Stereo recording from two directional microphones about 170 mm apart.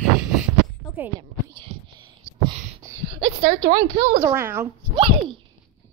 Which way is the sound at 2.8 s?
15° right (ahead or behind).